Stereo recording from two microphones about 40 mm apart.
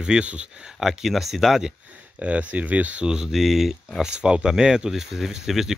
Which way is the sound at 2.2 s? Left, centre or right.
Right.